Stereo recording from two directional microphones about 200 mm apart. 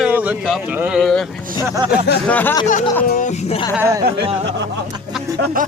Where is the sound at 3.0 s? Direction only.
40° left (ahead or behind).